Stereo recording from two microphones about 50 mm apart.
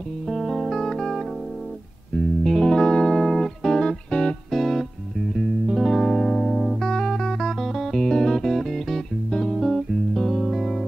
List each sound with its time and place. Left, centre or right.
0.3 s music: centre
4.5 s music: centre
6.8 s music: centre
7.6 s music: centre
9.6 s music: centre